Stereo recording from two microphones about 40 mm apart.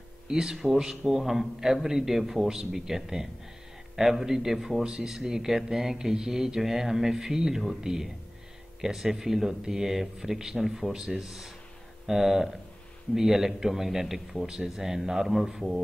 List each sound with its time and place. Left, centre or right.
0.3 s speech: centre
10.9 s speech: centre
11.1 s speech: centre